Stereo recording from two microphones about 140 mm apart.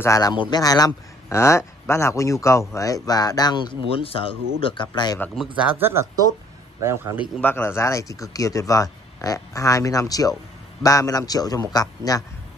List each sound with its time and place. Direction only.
0.0 s speech: 25° left (ahead or behind)
3.9 s speech: 40° left (ahead or behind)
5.7 s a man's voice: 15° right (ahead or behind)
7.3 s speech: 15° left (ahead or behind)